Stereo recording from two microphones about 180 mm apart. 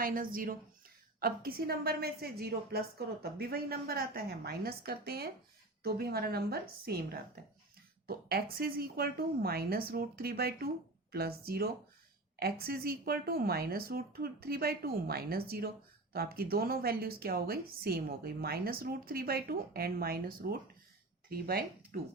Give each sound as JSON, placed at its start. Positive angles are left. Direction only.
{"t": 0.0, "sound": "a woman's voice", "side_deg": -50}